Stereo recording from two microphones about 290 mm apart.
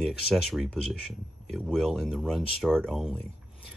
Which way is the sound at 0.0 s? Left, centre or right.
Centre.